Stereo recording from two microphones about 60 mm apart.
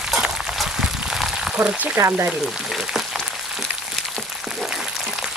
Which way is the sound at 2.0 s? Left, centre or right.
Right.